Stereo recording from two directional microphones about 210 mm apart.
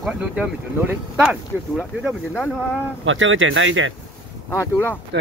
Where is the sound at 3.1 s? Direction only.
65° right (ahead or behind).